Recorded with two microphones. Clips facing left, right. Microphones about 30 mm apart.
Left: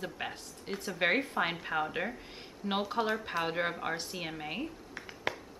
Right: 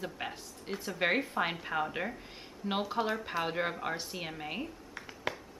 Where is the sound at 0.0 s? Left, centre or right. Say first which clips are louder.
Even; centre.